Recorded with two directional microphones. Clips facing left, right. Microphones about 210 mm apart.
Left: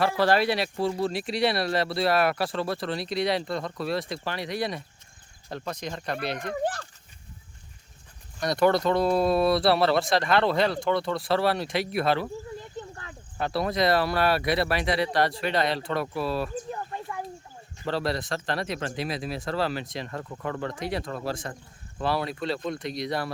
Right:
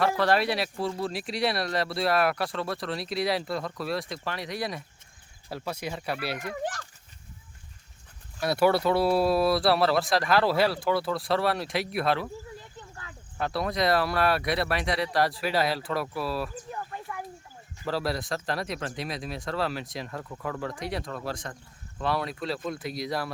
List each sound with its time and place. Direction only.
0.2 s speech: centre (ahead or behind)
6.5 s speech: 35° left (ahead or behind)
8.4 s speech: 5° right (ahead or behind)
13.4 s speech: centre (ahead or behind)
16.9 s a sound: 25° left (ahead or behind)
17.8 s speech: centre (ahead or behind)